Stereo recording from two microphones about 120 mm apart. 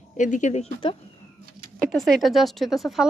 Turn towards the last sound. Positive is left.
turn(degrees=0)  # may be behind; listen again after turning